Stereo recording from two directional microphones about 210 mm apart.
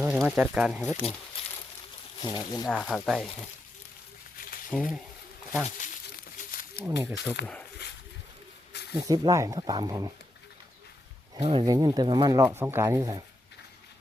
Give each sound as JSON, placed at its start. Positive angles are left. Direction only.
{"t": 0.0, "sound": "speech", "side_deg": 0}
{"t": 2.2, "sound": "speech", "side_deg": 20}
{"t": 2.6, "sound": "speech", "side_deg": 0}
{"t": 4.7, "sound": "speech", "side_deg": -5}
{"t": 6.5, "sound": "wild animals", "side_deg": 45}
{"t": 6.8, "sound": "speech", "side_deg": -15}
{"t": 7.4, "sound": "speech", "side_deg": 55}
{"t": 9.0, "sound": "speech", "side_deg": -20}
{"t": 11.3, "sound": "speech", "side_deg": -20}